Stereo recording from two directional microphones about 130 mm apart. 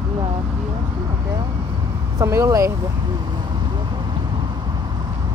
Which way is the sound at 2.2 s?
25° right (ahead or behind).